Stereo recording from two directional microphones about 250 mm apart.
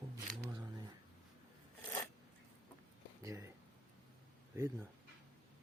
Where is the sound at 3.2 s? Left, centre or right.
Centre.